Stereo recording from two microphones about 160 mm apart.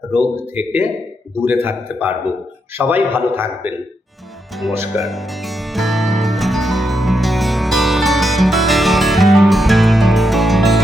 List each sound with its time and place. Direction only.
0.1 s a man's voice: 10° right (ahead or behind)
4.7 s a man's voice: 15° right (ahead or behind)
5.0 s music: centre (ahead or behind)